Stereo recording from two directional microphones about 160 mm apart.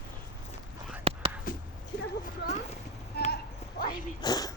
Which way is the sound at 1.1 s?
35° right (ahead or behind).